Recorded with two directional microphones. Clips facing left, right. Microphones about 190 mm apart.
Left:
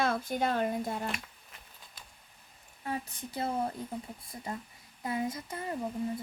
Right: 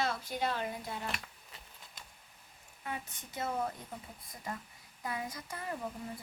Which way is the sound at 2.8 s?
35° left (ahead or behind).